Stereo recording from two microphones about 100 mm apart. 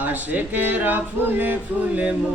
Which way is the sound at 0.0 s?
15° right (ahead or behind).